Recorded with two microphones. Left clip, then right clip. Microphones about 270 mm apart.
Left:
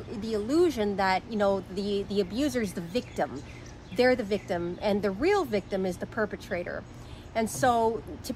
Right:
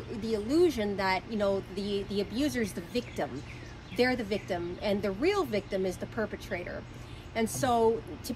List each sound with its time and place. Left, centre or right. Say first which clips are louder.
0.2 s speech: left 1 dB; centre